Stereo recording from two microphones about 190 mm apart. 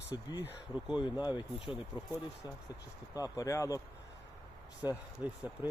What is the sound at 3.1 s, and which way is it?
Speech, 20° left (ahead or behind).